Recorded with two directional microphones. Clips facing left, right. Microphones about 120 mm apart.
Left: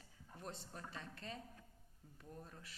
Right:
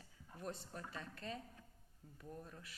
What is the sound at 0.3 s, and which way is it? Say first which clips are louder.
Speech: right 3 dB; 30° left (ahead or behind).